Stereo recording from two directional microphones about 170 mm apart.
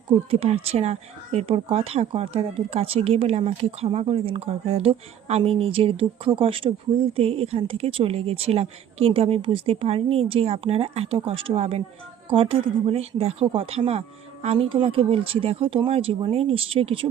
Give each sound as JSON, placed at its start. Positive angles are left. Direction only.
{"t": 0.3, "sound": "speech", "side_deg": -35}